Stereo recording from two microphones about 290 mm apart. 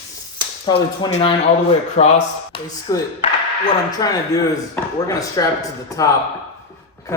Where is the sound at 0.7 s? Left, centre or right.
Centre.